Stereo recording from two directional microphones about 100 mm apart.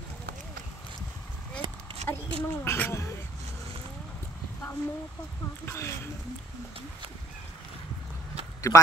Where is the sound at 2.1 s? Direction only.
20° left (ahead or behind).